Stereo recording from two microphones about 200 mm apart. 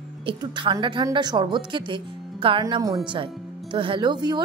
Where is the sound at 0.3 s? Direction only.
25° right (ahead or behind).